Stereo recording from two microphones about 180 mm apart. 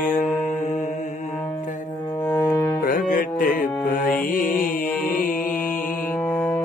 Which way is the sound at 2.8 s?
50° left (ahead or behind).